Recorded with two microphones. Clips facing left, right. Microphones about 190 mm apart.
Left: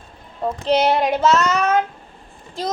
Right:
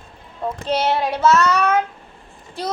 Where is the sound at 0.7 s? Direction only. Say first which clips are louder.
Left 3 dB; 20° left (ahead or behind).